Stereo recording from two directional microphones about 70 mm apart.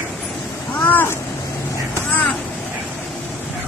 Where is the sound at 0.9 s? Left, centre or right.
Left.